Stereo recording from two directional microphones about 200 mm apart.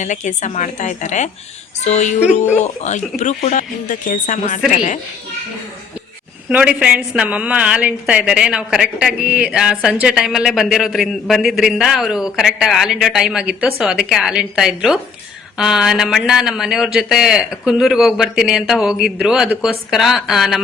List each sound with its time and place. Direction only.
0.0 s speech: 35° left (ahead or behind)
6.5 s a woman's voice: 5° right (ahead or behind)